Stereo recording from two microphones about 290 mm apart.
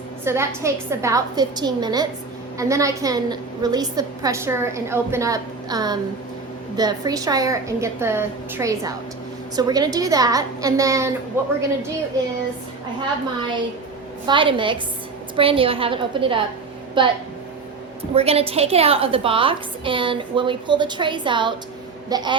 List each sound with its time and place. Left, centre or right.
0.3 s a woman's voice: centre
14.3 s a woman's voice: centre